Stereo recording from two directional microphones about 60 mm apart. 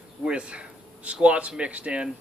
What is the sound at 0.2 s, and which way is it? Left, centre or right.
Speech, centre.